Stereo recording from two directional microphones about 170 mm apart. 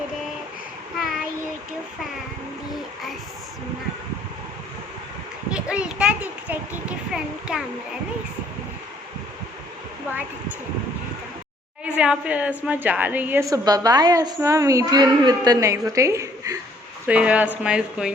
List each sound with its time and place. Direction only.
5.5 s a child's voice: 5° right (ahead or behind)
11.9 s a woman's voice: 5° right (ahead or behind)
17.1 s a woman's voice: 5° right (ahead or behind)